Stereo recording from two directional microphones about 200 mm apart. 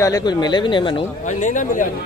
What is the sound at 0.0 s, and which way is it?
Speech, 20° left (ahead or behind).